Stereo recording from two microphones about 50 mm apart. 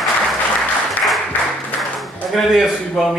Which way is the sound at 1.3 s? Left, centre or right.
Left.